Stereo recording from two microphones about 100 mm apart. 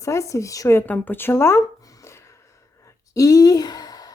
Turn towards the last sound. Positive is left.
turn(degrees=40)  # may be behind; listen again after turning